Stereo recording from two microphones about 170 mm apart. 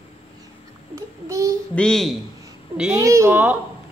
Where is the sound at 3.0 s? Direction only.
15° right (ahead or behind).